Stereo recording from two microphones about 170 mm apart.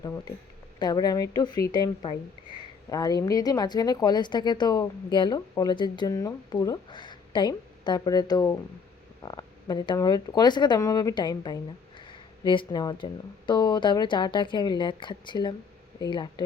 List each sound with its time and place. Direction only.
0.0 s speech: 20° left (ahead or behind)